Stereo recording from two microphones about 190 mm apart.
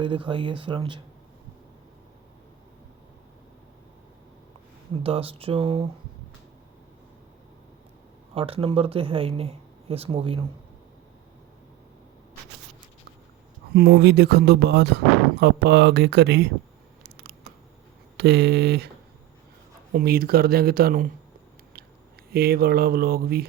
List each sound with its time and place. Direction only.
0.0 s speech: 25° right (ahead or behind)
5.0 s speech: 30° right (ahead or behind)
8.4 s speech: 30° right (ahead or behind)
13.7 s speech: 55° right (ahead or behind)
17.0 s a sound: 60° right (ahead or behind)
18.2 s speech: 60° right (ahead or behind)
19.9 s speech: 50° right (ahead or behind)
22.3 s speech: 55° right (ahead or behind)